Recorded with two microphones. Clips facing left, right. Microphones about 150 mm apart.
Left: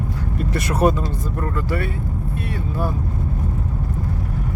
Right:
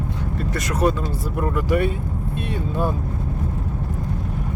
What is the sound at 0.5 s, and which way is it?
Speech, 30° left (ahead or behind).